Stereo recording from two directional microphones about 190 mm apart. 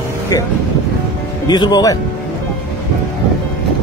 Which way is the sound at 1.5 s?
20° left (ahead or behind).